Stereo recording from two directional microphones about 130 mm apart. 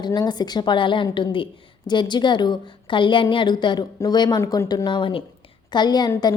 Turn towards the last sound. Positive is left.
turn(degrees=35)  # may be behind; listen again after turning